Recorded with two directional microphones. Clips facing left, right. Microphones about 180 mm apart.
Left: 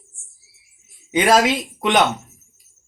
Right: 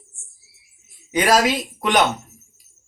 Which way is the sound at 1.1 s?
25° left (ahead or behind).